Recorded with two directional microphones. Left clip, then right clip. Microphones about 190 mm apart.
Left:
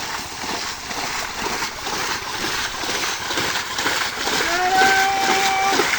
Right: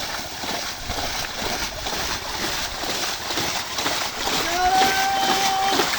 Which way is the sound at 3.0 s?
35° right (ahead or behind).